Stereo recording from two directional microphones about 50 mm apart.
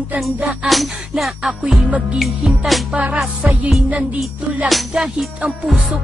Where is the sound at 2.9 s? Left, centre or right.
Right.